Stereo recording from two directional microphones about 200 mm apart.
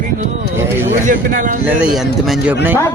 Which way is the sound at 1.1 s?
40° right (ahead or behind).